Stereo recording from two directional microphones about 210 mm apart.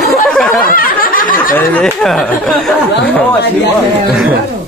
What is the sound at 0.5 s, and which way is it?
Snicker, 40° left (ahead or behind).